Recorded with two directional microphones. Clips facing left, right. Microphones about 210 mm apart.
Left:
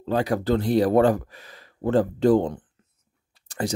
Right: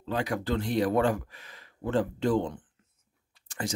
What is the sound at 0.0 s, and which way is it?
Speech, 35° left (ahead or behind).